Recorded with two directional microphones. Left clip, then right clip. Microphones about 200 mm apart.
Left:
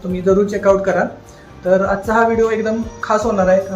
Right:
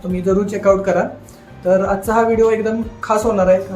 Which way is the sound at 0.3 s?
10° right (ahead or behind).